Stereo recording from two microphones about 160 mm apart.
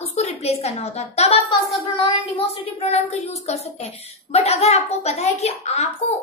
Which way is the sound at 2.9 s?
45° left (ahead or behind).